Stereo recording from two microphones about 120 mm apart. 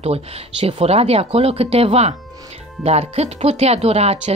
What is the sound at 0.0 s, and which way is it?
Speech, 60° right (ahead or behind).